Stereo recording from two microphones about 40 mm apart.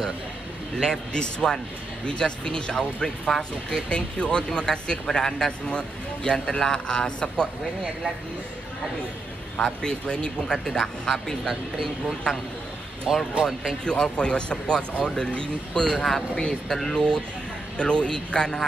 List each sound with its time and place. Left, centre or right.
0.7 s speech: centre
9.8 s speech: left
13.1 s speech: centre
13.8 s speech: left
17.7 s speech: left